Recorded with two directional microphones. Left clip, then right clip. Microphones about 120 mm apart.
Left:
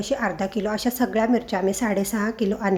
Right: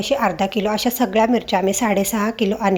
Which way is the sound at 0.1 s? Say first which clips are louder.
Right 6 dB; 20° right (ahead or behind).